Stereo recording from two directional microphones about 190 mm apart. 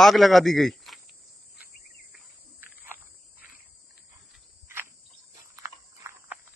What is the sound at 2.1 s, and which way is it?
Cricket, 10° right (ahead or behind).